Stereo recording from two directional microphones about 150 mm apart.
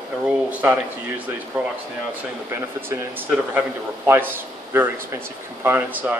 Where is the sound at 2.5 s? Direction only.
15° right (ahead or behind).